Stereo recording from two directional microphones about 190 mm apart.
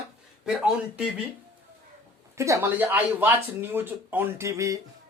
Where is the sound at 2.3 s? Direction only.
15° right (ahead or behind).